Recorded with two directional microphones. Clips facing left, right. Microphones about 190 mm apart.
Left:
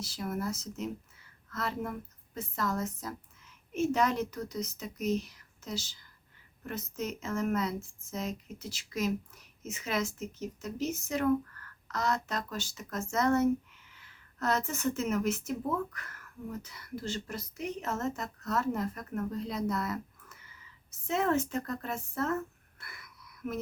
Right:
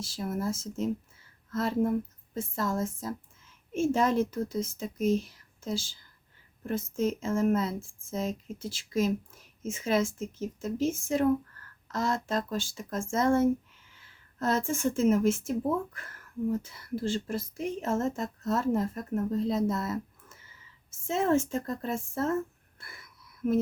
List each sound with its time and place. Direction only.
0.0 s a woman's voice: 30° right (ahead or behind)